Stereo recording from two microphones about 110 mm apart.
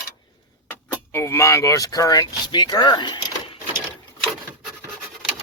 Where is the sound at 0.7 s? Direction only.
20° left (ahead or behind); by 3.6 s 50° left (ahead or behind).